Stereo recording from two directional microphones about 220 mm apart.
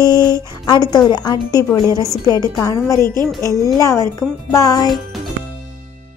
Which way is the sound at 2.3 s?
15° left (ahead or behind).